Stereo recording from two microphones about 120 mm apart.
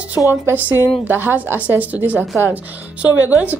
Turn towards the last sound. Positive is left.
turn(degrees=-15)  # may be behind; listen again after turning